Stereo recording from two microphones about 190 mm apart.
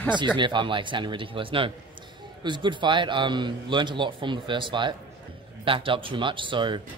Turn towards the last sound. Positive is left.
turn(degrees=-25)  # may be behind; listen again after turning